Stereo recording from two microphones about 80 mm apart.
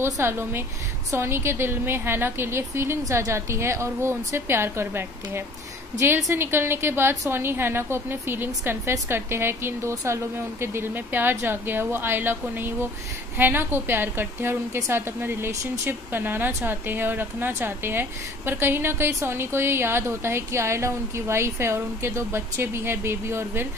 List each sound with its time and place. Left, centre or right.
0.0 s speech: right